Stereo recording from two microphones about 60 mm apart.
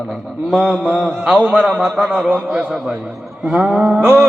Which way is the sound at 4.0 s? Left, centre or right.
Right.